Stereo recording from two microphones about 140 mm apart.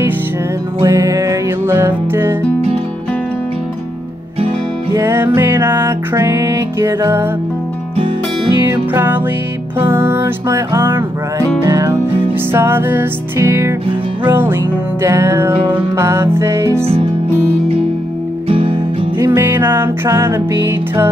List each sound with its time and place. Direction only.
0.8 s music: 25° right (ahead or behind)
4.9 s music: 20° right (ahead or behind)
8.9 s music: 15° right (ahead or behind)
18.5 s music: 45° right (ahead or behind)
19.1 s music: 20° right (ahead or behind)